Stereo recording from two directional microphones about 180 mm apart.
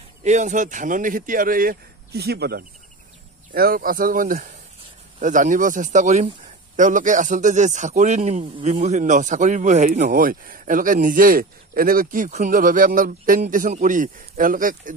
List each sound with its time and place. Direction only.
0.2 s speech: 40° right (ahead or behind)